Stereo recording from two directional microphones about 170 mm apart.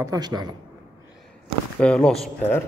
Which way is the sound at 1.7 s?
5° left (ahead or behind).